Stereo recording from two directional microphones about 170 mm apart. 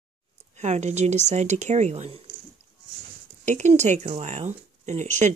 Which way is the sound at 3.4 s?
45° right (ahead or behind).